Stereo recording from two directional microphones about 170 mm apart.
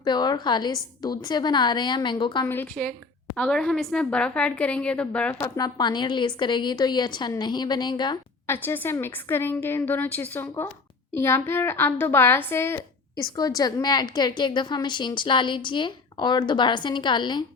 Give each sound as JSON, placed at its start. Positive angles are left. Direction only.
{"t": 0.0, "sound": "a woman's voice", "side_deg": 25}
{"t": 2.5, "sound": "a woman's voice", "side_deg": 10}
{"t": 5.4, "sound": "a woman's voice", "side_deg": 20}
{"t": 8.4, "sound": "a woman's voice", "side_deg": 10}